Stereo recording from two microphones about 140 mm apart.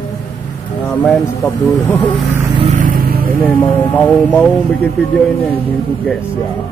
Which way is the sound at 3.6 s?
10° left (ahead or behind).